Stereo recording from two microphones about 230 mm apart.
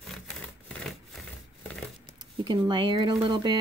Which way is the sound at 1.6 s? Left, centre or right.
Centre.